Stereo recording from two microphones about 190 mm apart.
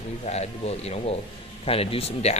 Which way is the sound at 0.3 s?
35° left (ahead or behind).